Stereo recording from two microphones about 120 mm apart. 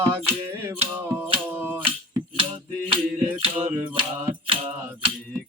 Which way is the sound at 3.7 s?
15° right (ahead or behind).